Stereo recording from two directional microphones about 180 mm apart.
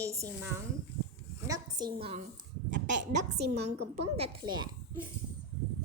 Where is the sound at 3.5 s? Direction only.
35° right (ahead or behind).